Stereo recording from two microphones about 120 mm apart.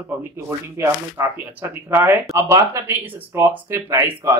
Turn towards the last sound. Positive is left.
turn(degrees=-25)  # may be behind; listen again after turning